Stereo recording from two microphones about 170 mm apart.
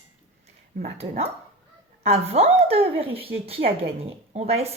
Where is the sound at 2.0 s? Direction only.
35° right (ahead or behind).